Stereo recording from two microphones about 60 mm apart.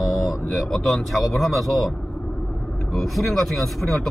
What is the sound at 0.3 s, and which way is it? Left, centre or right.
Speech, centre.